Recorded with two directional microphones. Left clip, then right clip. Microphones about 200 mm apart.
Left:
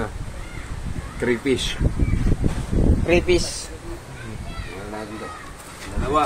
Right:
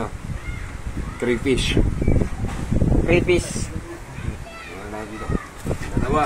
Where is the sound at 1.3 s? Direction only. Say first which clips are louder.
Right 1 dB; 15° right (ahead or behind).